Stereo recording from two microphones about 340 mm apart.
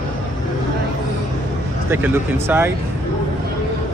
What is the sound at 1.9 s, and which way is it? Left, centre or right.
Speech, centre.